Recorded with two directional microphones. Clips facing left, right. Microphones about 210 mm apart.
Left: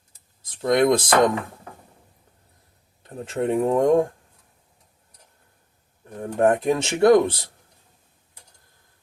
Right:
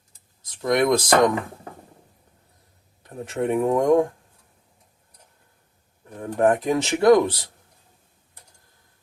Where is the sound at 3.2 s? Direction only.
25° left (ahead or behind).